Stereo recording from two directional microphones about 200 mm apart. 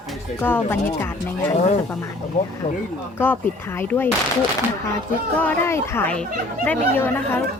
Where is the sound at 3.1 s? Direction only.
10° left (ahead or behind).